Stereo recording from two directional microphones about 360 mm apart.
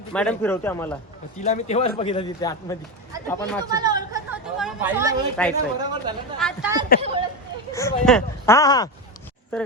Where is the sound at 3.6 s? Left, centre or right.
Centre.